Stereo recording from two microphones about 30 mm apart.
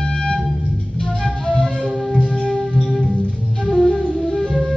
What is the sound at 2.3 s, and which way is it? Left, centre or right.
Music, left.